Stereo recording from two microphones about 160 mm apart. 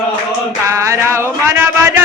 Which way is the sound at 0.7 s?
15° right (ahead or behind).